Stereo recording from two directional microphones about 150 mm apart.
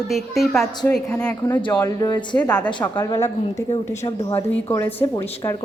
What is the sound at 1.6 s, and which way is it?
Speech, 25° left (ahead or behind).